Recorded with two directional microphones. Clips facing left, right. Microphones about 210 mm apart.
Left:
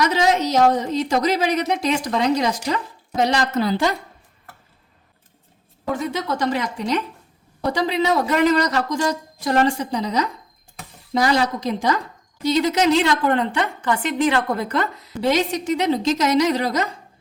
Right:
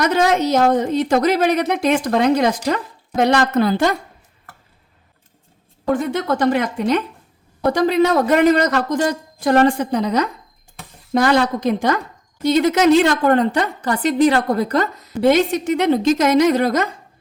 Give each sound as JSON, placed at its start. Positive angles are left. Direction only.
{"t": 0.0, "sound": "a woman's voice", "side_deg": -55}
{"t": 5.9, "sound": "a woman's voice", "side_deg": -55}
{"t": 15.2, "sound": "a woman's voice", "side_deg": -55}